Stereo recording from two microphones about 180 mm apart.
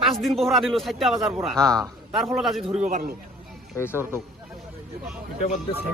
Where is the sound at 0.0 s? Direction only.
Centre (ahead or behind).